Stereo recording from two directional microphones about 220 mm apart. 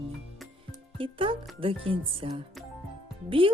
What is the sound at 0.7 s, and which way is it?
Music, 25° right (ahead or behind).